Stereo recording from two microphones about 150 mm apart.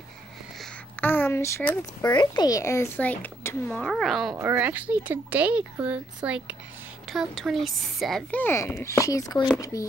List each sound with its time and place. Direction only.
0.6 s a sound: 5° left (ahead or behind)
2.1 s speech: 25° left (ahead or behind); by 4.4 s centre (ahead or behind)
4.4 s speech: 10° right (ahead or behind); by 9.8 s 20° left (ahead or behind)